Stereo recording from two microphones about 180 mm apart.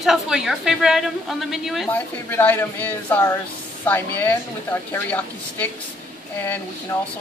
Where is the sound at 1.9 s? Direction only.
10° left (ahead or behind).